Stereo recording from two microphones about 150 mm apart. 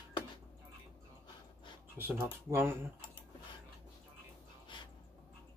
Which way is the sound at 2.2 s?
15° right (ahead or behind).